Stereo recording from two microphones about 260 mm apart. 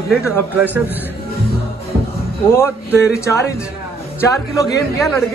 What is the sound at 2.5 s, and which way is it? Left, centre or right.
Speech, centre.